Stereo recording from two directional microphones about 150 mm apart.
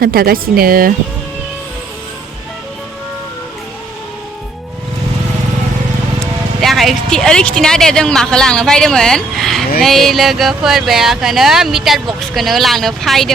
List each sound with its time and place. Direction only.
0.0 s a woman's voice: 80° right
6.6 s speech: centre (ahead or behind)